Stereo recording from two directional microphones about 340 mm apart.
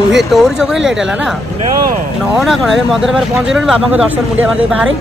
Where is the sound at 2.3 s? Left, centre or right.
Centre.